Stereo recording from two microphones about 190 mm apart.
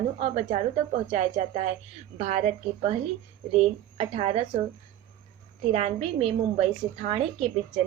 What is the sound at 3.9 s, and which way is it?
Speech, 35° right (ahead or behind).